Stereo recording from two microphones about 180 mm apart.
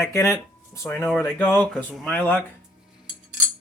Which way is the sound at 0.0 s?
15° left (ahead or behind).